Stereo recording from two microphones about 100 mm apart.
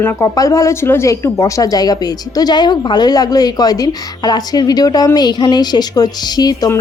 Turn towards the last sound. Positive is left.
turn(degrees=40)  # may be behind; listen again after turning